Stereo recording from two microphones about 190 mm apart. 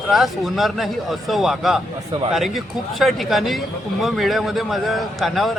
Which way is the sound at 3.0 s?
Centre (ahead or behind).